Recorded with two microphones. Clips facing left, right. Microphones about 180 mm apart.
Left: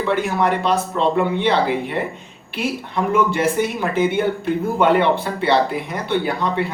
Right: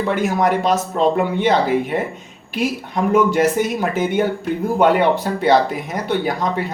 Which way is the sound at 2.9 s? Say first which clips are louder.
Right 3 dB; 40° right (ahead or behind).